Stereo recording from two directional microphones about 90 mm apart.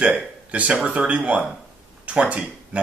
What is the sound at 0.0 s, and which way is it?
Speech, 15° right (ahead or behind).